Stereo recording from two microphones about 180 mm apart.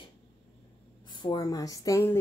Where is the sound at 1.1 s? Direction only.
25° left (ahead or behind).